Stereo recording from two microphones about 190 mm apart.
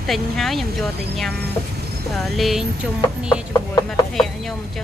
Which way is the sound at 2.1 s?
Centre (ahead or behind).